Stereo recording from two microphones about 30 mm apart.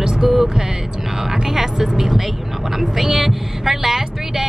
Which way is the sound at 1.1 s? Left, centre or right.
Centre.